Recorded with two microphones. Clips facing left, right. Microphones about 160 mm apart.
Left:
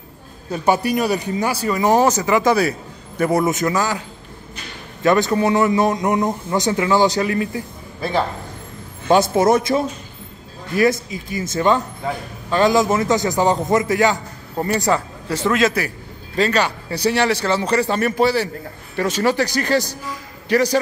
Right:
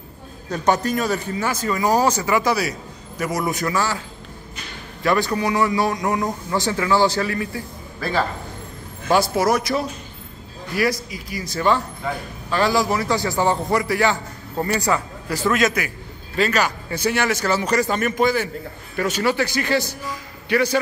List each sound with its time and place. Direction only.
0.5 s a man's voice: 10° left (ahead or behind)
5.0 s speech: 20° left (ahead or behind); by 20.8 s 40° left (ahead or behind)